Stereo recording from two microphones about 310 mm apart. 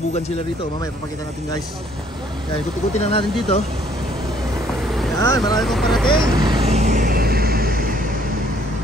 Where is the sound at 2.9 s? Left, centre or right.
Centre.